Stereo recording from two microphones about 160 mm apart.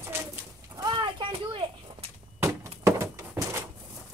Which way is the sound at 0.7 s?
25° right (ahead or behind).